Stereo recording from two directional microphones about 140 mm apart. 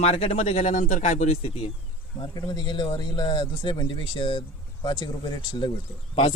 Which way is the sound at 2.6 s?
35° left (ahead or behind).